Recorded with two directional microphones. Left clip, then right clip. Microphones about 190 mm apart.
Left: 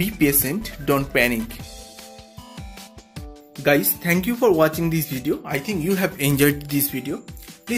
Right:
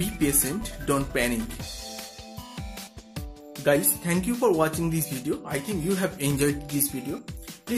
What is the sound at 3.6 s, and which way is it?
Music, centre (ahead or behind).